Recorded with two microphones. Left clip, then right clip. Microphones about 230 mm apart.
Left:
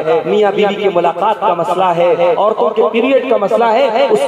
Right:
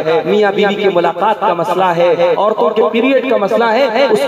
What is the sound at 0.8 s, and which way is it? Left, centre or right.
A man's voice, right.